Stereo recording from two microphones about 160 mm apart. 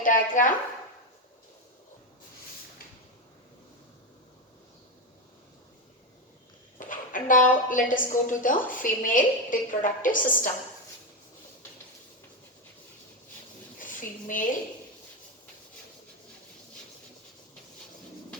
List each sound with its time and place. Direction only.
0.0 s a woman's voice: 55° left (ahead or behind)
6.7 s a woman's voice: 55° left (ahead or behind)
13.7 s a sound: 55° left (ahead or behind)